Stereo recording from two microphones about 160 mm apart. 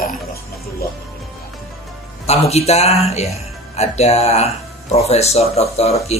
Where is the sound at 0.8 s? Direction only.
75° left (ahead or behind).